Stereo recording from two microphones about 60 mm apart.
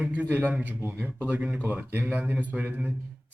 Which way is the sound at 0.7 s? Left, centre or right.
Right.